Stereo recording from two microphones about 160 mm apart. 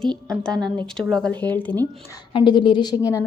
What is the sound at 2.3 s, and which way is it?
Speech, 30° left (ahead or behind).